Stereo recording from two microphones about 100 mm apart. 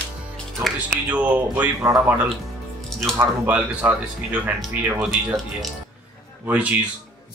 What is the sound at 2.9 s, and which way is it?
Music, 5° left (ahead or behind).